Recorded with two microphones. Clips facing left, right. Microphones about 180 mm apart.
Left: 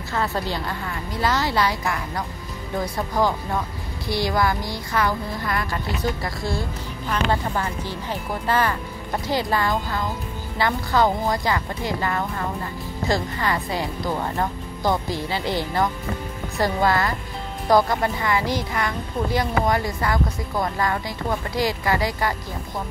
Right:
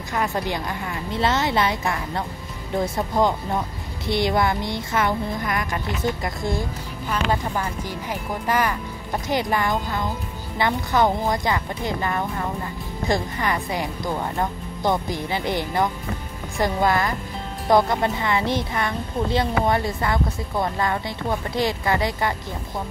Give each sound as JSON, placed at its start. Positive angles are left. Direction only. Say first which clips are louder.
{"t": 0.1, "sound": "speech", "louder": "right 1 dB", "side_deg": -20}